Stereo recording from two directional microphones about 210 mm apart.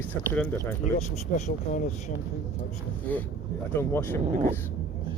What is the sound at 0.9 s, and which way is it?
Speech, 35° left (ahead or behind).